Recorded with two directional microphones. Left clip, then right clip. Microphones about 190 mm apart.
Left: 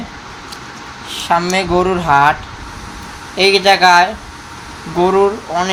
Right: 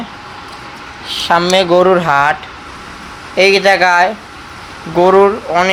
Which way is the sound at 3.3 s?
20° right (ahead or behind).